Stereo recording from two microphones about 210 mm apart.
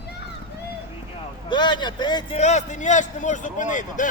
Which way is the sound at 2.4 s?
35° left (ahead or behind).